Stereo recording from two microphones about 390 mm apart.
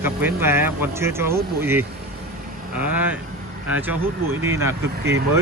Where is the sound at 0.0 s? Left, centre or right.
Centre.